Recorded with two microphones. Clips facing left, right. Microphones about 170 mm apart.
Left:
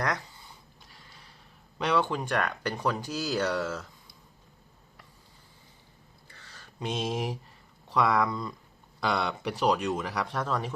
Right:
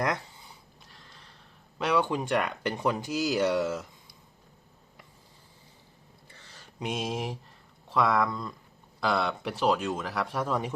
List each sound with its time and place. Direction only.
0.8 s snort: centre (ahead or behind)
1.8 s speech: 10° right (ahead or behind)
6.2 s a sound: 25° right (ahead or behind)
6.8 s speech: 5° right (ahead or behind)
10.4 s speech: 15° right (ahead or behind)